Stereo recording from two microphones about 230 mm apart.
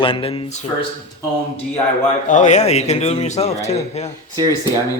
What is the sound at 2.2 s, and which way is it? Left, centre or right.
Speech, left.